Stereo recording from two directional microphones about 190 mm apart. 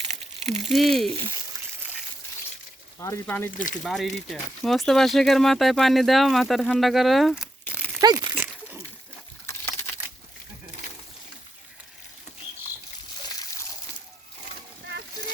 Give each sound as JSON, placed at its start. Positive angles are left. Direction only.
{"t": 0.0, "sound": "a sound", "side_deg": -35}
{"t": 0.7, "sound": "speech", "side_deg": 0}
{"t": 3.0, "sound": "speech", "side_deg": 15}
{"t": 3.8, "sound": "speech", "side_deg": 0}
{"t": 8.0, "sound": "crumpling", "side_deg": -20}
{"t": 9.5, "sound": "crumpling", "side_deg": 15}